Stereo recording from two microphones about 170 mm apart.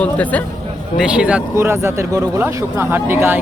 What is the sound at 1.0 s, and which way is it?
Speech, 5° right (ahead or behind).